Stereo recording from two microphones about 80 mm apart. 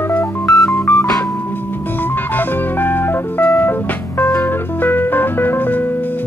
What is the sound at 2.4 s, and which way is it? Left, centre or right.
Music, left.